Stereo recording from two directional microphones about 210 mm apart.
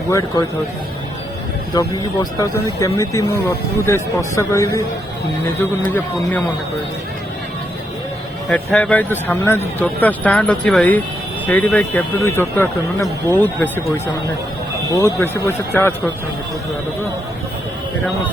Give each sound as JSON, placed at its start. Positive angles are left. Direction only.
{"t": 0.1, "sound": "speech", "side_deg": 15}
{"t": 1.7, "sound": "speech", "side_deg": 15}
{"t": 8.4, "sound": "speech", "side_deg": 5}
{"t": 15.0, "sound": "speech", "side_deg": 10}